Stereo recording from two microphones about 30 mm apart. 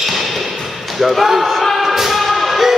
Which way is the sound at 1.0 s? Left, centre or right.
Centre.